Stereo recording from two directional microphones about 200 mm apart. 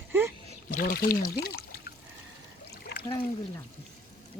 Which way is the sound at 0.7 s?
45° left (ahead or behind).